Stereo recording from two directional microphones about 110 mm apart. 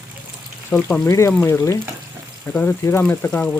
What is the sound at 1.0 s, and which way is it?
Speech, 25° left (ahead or behind).